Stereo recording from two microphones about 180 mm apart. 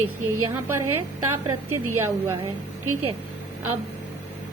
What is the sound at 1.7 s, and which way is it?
Speech, 15° right (ahead or behind).